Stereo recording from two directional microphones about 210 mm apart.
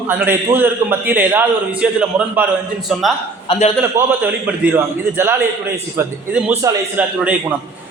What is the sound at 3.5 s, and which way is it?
Speech, 30° left (ahead or behind).